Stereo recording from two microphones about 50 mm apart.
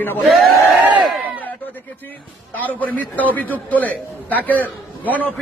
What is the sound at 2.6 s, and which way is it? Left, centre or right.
A man's voice, left.